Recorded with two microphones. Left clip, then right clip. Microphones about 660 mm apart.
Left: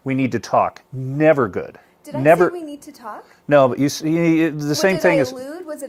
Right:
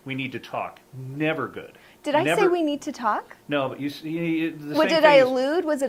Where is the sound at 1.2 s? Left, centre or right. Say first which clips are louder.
Left 11 dB; left.